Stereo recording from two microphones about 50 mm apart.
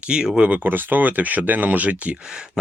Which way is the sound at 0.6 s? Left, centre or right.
Right.